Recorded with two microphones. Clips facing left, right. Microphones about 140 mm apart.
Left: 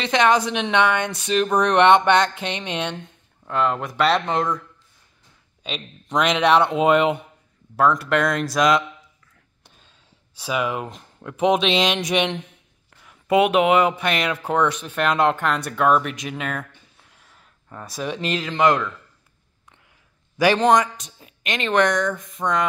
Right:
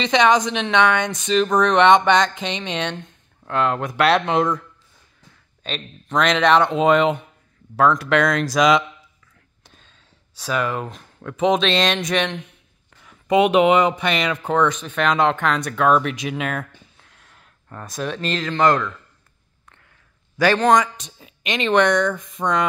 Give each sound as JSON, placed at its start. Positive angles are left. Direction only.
{"t": 0.0, "sound": "speech", "side_deg": 5}
{"t": 5.6, "sound": "speech", "side_deg": 10}
{"t": 9.8, "sound": "a sound", "side_deg": 10}
{"t": 11.2, "sound": "speech", "side_deg": 10}
{"t": 17.0, "sound": "speech", "side_deg": 5}
{"t": 20.3, "sound": "speech", "side_deg": 15}
{"t": 20.7, "sound": "speech", "side_deg": 0}